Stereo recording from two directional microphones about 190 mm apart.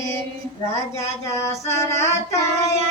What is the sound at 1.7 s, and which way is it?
Female singing, 15° left (ahead or behind).